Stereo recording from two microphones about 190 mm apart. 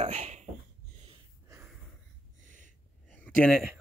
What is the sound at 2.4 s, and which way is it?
Snort, 45° right (ahead or behind).